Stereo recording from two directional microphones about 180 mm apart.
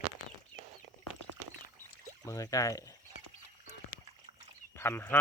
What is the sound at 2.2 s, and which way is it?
Speech, 15° left (ahead or behind).